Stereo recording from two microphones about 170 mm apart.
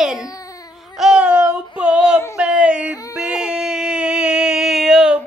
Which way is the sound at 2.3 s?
5° right (ahead or behind).